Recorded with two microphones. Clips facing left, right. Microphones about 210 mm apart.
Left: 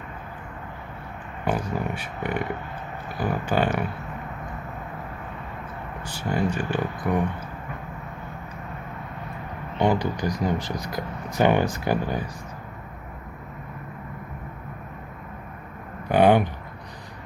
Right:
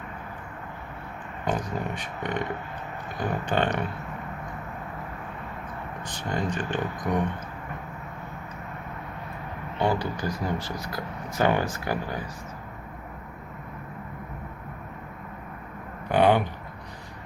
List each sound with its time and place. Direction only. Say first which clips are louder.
1.5 s speech: left 3 dB; 10° left (ahead or behind)
6.1 s speech: left 4 dB; 10° left (ahead or behind)
9.7 s speech: left 3 dB; 15° left (ahead or behind)
16.0 s a sound: left 3 dB; 15° left (ahead or behind)